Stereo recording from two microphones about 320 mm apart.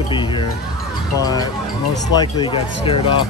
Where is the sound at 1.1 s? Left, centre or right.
Centre.